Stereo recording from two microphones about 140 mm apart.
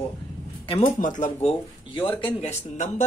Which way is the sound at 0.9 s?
65° left (ahead or behind).